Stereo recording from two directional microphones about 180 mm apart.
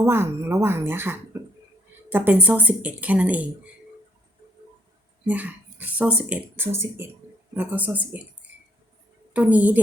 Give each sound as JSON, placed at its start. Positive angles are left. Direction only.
{"t": 0.0, "sound": "speech", "side_deg": -15}
{"t": 5.2, "sound": "speech", "side_deg": -10}
{"t": 9.3, "sound": "speech", "side_deg": -10}